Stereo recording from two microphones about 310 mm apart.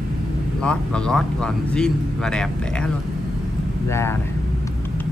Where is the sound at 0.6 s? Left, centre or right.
Centre.